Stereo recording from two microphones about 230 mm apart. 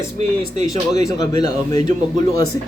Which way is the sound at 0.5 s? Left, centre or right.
Right.